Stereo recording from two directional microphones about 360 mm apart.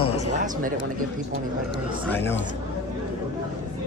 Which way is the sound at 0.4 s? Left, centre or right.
Right.